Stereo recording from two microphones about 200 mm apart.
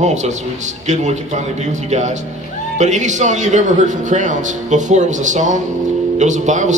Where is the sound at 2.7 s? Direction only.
35° right (ahead or behind).